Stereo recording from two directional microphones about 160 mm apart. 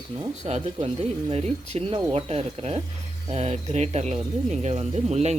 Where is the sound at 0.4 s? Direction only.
45° right (ahead or behind).